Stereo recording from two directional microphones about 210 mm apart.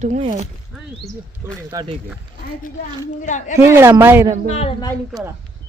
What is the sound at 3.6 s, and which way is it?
Speech, 10° right (ahead or behind).